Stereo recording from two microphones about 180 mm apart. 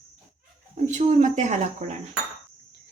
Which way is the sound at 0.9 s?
40° right (ahead or behind).